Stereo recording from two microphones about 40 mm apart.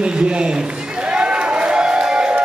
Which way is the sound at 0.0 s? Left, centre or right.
Right.